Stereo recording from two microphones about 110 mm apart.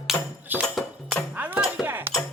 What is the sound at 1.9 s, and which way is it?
Music, 20° right (ahead or behind).